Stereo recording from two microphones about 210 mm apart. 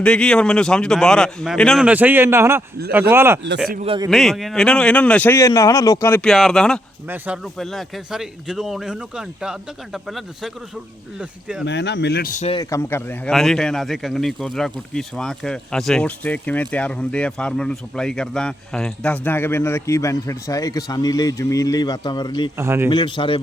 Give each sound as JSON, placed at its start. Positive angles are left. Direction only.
{"t": 0.0, "sound": "speech", "side_deg": 5}
{"t": 3.8, "sound": "a man's voice", "side_deg": -20}
{"t": 4.1, "sound": "speech", "side_deg": 0}
{"t": 11.6, "sound": "speech", "side_deg": 55}
{"t": 12.5, "sound": "speech", "side_deg": 15}
{"t": 22.5, "sound": "speech", "side_deg": -10}
{"t": 22.9, "sound": "speech", "side_deg": 20}